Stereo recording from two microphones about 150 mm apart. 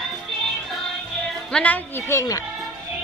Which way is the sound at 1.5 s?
10° left (ahead or behind).